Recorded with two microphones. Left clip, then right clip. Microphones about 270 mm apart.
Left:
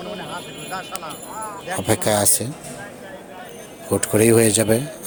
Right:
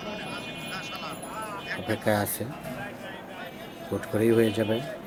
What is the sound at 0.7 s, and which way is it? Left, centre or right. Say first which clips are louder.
Speech: left 8 dB; centre.